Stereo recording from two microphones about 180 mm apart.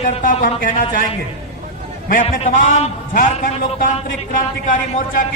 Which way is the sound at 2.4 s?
40° left (ahead or behind).